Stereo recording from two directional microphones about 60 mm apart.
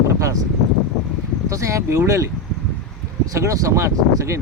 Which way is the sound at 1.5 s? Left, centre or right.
Right.